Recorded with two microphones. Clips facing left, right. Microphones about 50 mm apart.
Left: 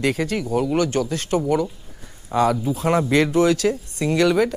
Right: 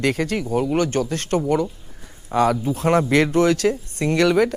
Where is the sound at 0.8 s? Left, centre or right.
Right.